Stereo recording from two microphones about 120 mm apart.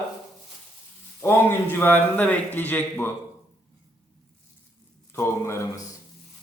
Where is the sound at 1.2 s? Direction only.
20° left (ahead or behind).